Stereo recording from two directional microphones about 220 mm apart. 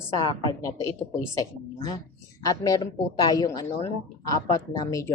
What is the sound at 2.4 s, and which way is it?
A woman's voice, 15° left (ahead or behind).